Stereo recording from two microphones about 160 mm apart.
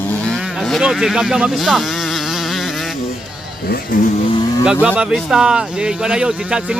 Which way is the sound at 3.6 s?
65° left (ahead or behind).